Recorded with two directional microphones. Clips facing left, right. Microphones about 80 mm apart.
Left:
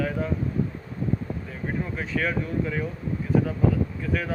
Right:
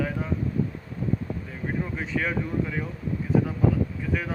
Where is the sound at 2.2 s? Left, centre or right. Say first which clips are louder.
Left 2 dB; centre.